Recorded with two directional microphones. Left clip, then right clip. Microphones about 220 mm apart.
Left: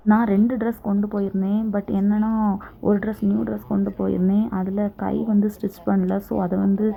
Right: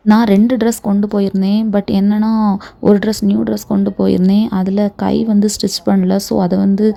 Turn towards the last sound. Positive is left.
turn(degrees=-40)  # may be behind; listen again after turning